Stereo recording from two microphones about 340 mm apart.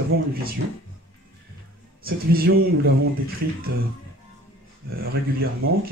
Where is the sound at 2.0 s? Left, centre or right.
Right.